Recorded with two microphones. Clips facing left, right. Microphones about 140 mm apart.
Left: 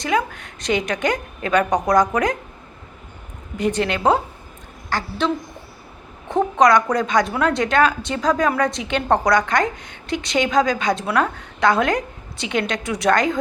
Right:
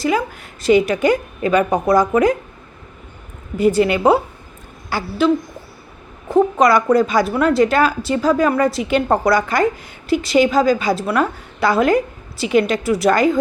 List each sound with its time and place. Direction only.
0.0 s a woman's voice: 5° right (ahead or behind)
3.6 s a woman's voice: 5° right (ahead or behind)